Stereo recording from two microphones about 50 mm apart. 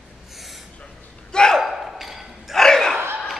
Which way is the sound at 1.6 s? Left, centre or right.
Centre.